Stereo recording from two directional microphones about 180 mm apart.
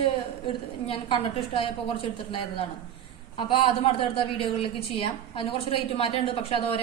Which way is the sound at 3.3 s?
30° left (ahead or behind).